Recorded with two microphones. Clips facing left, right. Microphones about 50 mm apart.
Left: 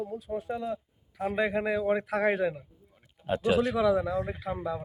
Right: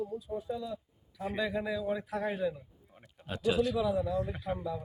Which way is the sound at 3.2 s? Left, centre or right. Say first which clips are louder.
Left 5 dB; left.